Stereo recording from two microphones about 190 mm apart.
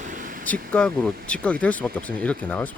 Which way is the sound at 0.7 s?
5° left (ahead or behind).